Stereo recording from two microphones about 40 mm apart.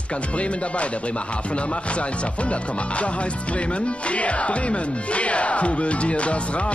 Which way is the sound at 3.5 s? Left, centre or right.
Left.